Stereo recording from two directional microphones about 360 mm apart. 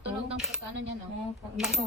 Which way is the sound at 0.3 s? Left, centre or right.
Centre.